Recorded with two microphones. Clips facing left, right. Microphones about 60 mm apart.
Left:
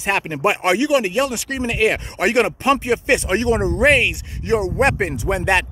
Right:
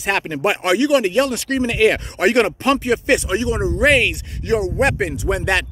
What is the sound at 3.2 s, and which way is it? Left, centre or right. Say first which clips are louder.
Speech: left 2 dB; left.